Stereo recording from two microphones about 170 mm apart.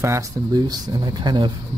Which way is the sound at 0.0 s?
20° right (ahead or behind).